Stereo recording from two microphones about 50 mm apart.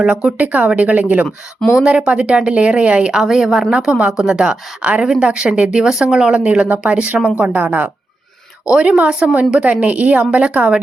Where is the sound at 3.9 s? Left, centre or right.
Centre.